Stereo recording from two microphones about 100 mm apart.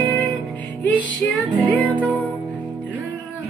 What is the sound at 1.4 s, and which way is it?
Music, 15° left (ahead or behind).